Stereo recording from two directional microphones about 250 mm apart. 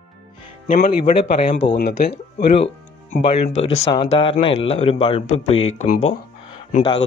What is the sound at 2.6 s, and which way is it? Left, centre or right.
A man's voice, left.